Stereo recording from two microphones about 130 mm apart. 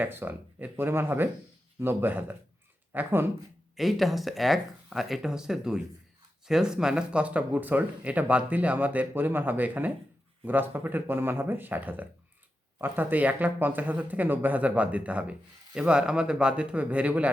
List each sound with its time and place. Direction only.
0.0 s speech: 15° right (ahead or behind)
3.8 s speech: centre (ahead or behind)